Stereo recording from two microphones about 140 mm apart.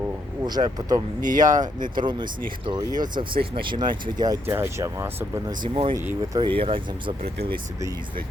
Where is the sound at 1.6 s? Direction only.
30° right (ahead or behind).